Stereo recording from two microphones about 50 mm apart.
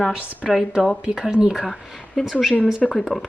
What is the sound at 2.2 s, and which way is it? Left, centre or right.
Speech, centre.